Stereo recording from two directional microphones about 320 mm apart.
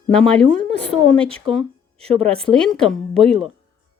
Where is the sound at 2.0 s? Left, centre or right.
Centre.